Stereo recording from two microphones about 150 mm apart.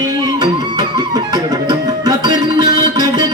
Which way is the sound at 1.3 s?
25° right (ahead or behind).